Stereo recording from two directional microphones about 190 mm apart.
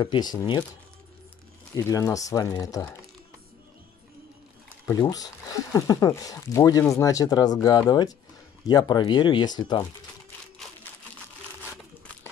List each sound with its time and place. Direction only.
0.0 s speech: 25° left (ahead or behind)
1.8 s speech: 15° left (ahead or behind)
5.0 s speech: 20° left (ahead or behind)